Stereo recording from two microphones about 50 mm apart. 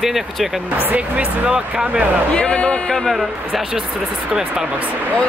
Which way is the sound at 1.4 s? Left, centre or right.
Centre.